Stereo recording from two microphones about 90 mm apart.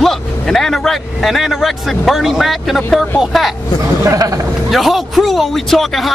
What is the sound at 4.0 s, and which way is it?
Speech, 40° right (ahead or behind).